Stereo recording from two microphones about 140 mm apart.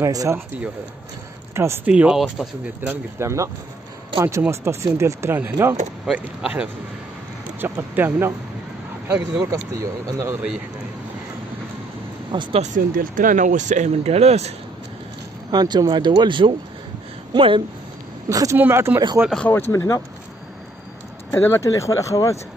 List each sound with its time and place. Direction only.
0.0 s speech: 20° right (ahead or behind)
1.5 s speech: 20° right (ahead or behind)
1.9 s speech: 5° right (ahead or behind)
9.4 s speech: 25° right (ahead or behind)
12.3 s speech: 35° right (ahead or behind)
12.7 s speech: 70° right (ahead or behind); by 14.5 s 50° right (ahead or behind)
15.5 s speech: 30° right (ahead or behind)
18.3 s speech: 25° right (ahead or behind)
19.3 s speech: 10° left (ahead or behind)
19.7 s speech: 20° left (ahead or behind)
21.3 s speech: 20° left (ahead or behind)